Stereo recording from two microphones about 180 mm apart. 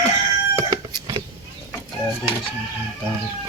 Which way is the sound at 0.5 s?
20° right (ahead or behind).